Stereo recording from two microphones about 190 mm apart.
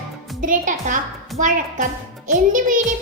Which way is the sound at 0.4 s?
40° right (ahead or behind).